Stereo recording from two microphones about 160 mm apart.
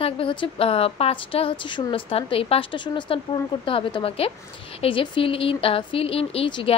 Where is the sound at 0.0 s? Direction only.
30° left (ahead or behind).